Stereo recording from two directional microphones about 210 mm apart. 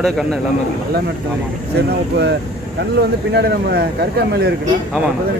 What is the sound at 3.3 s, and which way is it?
Speech, 50° right (ahead or behind).